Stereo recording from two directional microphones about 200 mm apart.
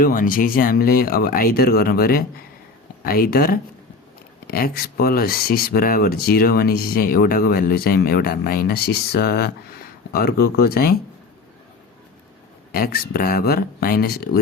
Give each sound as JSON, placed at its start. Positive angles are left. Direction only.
{"t": 0.0, "sound": "speech", "side_deg": 45}
{"t": 12.7, "sound": "speech", "side_deg": 50}